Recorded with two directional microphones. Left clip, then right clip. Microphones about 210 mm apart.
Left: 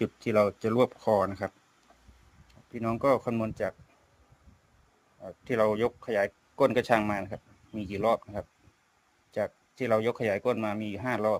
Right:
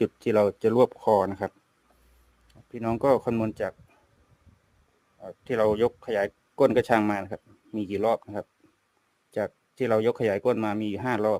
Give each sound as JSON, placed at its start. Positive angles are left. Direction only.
{"t": 0.0, "sound": "speech", "side_deg": -30}
{"t": 2.7, "sound": "speech", "side_deg": -25}
{"t": 5.2, "sound": "speech", "side_deg": -25}